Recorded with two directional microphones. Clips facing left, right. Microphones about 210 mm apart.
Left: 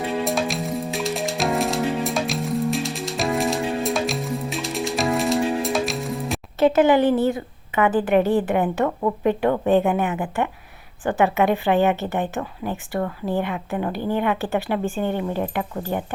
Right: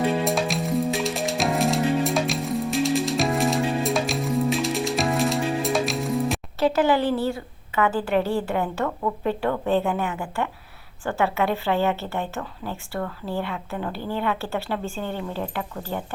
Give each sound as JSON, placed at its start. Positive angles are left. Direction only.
{"t": 0.3, "sound": "music", "side_deg": 0}
{"t": 6.6, "sound": "a woman's voice", "side_deg": 20}